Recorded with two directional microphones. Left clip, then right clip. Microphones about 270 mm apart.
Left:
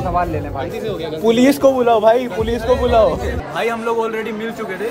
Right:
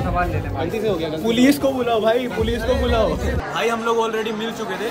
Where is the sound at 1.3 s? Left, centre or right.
Left.